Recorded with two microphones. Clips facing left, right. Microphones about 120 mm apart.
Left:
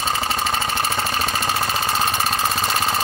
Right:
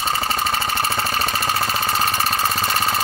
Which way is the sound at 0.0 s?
5° right (ahead or behind).